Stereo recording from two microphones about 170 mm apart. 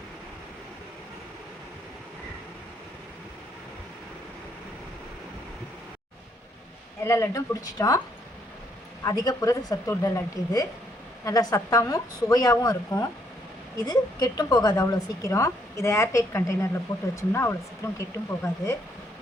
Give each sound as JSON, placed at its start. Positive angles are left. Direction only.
{"t": 7.0, "sound": "a woman's voice", "side_deg": 15}
{"t": 9.0, "sound": "a woman's voice", "side_deg": 20}